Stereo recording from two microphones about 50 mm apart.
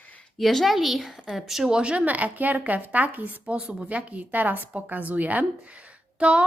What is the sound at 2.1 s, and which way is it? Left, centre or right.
A woman's voice, right.